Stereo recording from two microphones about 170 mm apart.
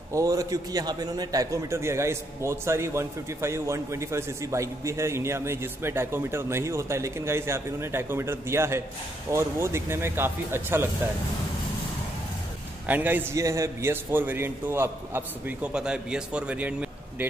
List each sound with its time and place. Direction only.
0.1 s a man's voice: 20° right (ahead or behind)
12.8 s a man's voice: 10° right (ahead or behind)